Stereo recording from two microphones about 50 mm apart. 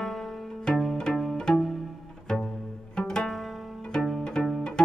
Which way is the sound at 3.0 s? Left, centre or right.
Centre.